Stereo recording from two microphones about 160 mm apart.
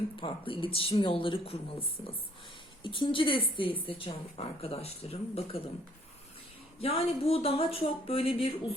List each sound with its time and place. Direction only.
0.2 s speech: 35° left (ahead or behind)
2.8 s speech: 30° left (ahead or behind)
6.7 s speech: 35° left (ahead or behind)